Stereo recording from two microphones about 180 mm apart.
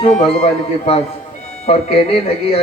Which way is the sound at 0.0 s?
35° left (ahead or behind).